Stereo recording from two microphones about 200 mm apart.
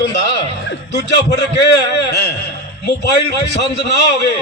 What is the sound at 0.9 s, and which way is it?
A man's voice, 60° left (ahead or behind).